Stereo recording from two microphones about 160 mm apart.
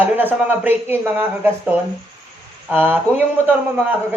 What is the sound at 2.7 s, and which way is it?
Speech, 10° right (ahead or behind).